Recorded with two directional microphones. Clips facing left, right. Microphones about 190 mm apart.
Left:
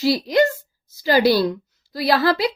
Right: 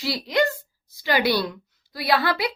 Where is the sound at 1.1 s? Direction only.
40° left (ahead or behind).